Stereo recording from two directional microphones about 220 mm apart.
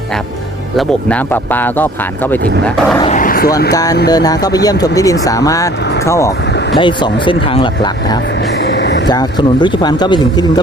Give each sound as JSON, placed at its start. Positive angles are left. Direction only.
{"t": 0.8, "sound": "speech", "side_deg": 5}
{"t": 3.0, "sound": "a sound", "side_deg": 35}
{"t": 3.7, "sound": "speech", "side_deg": 15}
{"t": 8.6, "sound": "vehicle", "side_deg": 50}
{"t": 9.0, "sound": "speech", "side_deg": 20}